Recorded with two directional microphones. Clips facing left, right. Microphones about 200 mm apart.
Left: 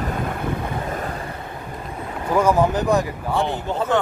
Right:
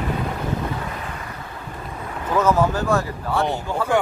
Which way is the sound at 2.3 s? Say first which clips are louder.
Left 1 dB; 15° left (ahead or behind).